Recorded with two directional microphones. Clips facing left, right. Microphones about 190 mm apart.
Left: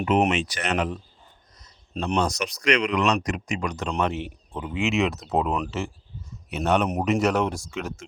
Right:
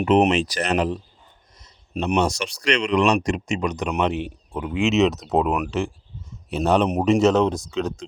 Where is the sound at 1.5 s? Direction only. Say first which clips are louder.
Right 2 dB; 25° right (ahead or behind).